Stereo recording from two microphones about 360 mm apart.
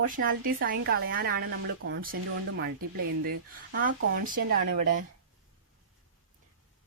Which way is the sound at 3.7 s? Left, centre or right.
Right.